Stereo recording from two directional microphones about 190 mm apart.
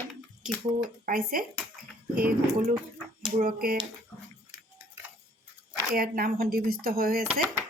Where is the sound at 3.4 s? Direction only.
50° right (ahead or behind).